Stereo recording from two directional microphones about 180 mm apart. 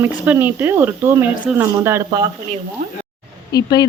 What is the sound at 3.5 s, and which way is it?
Speech, 20° left (ahead or behind).